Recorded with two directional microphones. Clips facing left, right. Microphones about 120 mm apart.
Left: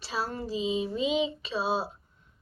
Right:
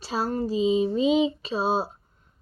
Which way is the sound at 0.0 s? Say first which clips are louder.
Right 6 dB; 40° right (ahead or behind).